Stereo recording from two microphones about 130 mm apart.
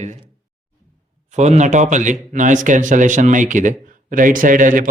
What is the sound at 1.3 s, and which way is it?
Speech, 60° right (ahead or behind).